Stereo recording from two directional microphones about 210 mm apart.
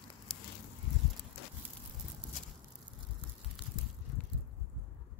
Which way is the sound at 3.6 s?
10° right (ahead or behind).